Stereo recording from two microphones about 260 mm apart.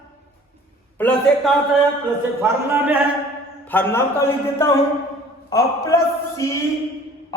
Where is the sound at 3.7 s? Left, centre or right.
Centre.